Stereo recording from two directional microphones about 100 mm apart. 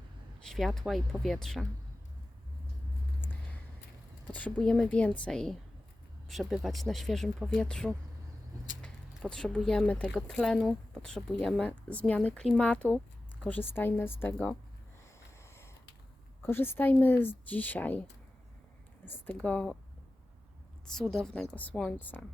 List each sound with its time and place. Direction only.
0.4 s speech: 5° left (ahead or behind)
4.4 s speech: 15° left (ahead or behind)
13.7 s a woman's voice: 20° left (ahead or behind)
15.4 s a sound: 25° left (ahead or behind)
16.4 s a woman's voice: 20° left (ahead or behind)
19.0 s speech: 20° left (ahead or behind)
20.8 s speech: 5° left (ahead or behind)
21.5 s speech: 15° left (ahead or behind)